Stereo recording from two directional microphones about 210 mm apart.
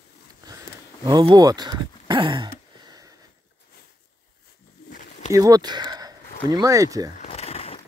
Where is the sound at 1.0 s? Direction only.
20° right (ahead or behind).